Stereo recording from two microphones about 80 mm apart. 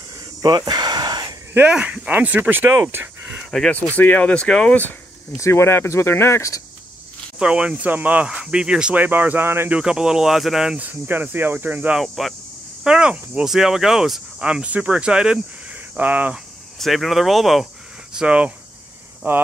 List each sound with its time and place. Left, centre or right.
0.4 s a sound: right
1.6 s speech: centre
3.7 s speech: left
5.4 s speech: left
7.3 s speech: centre
9.0 s speech: right
9.7 s speech: centre
10.8 s speech: right
12.0 s speech: centre
12.8 s speech: centre
16.7 s speech: centre
18.1 s speech: centre
19.2 s speech: right